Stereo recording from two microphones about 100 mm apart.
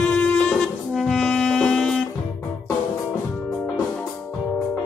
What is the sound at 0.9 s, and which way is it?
Brass instrument, centre (ahead or behind).